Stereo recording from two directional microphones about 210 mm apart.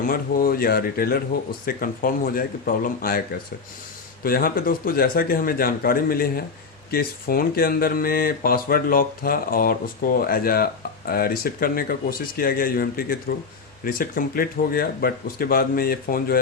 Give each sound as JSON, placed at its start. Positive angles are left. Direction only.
{"t": 0.0, "sound": "speech", "side_deg": 45}